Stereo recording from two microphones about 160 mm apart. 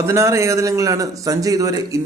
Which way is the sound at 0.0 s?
20° right (ahead or behind).